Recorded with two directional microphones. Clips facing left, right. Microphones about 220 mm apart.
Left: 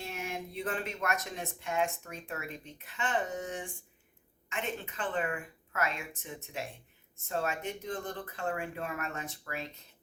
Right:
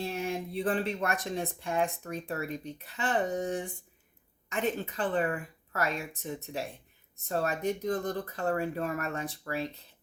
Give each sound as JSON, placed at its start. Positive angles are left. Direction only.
{"t": 0.0, "sound": "speech", "side_deg": -30}